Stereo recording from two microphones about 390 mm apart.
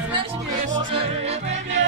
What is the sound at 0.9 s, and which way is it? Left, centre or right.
Yodeling, centre.